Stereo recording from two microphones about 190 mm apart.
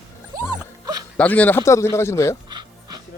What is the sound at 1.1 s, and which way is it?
Speech, 5° left (ahead or behind).